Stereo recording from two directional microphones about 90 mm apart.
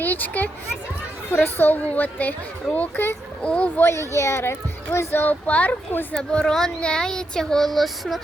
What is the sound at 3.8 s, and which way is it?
Speech, 30° left (ahead or behind).